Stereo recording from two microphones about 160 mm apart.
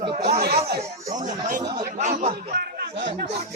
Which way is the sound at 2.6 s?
75° right (ahead or behind).